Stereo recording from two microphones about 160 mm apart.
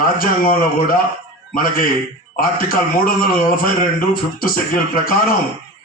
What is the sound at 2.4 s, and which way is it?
Speech, 65° left (ahead or behind).